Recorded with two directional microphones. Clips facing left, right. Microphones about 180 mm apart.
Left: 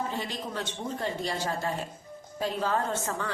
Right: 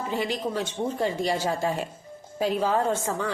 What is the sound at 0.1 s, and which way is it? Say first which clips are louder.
Speech: right 7 dB; 10° right (ahead or behind).